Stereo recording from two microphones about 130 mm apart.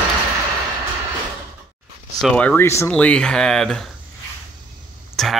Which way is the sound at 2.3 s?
10° left (ahead or behind).